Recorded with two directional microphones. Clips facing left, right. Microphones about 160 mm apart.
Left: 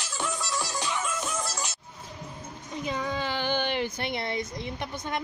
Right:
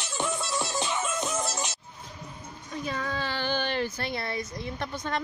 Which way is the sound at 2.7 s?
20° left (ahead or behind).